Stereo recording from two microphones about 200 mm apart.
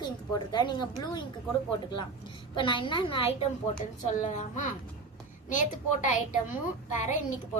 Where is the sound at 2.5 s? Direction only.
25° left (ahead or behind).